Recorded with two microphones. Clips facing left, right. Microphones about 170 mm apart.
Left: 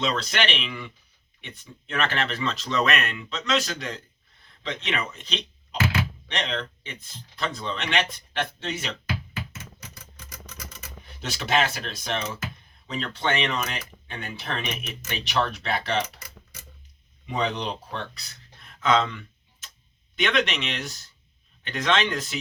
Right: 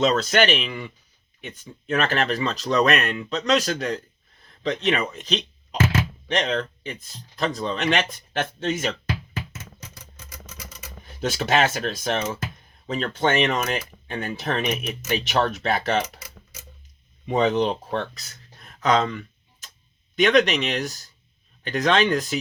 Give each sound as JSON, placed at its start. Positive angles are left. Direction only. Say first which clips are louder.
{"t": 0.0, "sound": "speech", "louder": "right 7 dB", "side_deg": -45}
{"t": 11.2, "sound": "speech", "louder": "right 4 dB", "side_deg": -45}
{"t": 17.2, "sound": "speech", "louder": "right 7 dB", "side_deg": -45}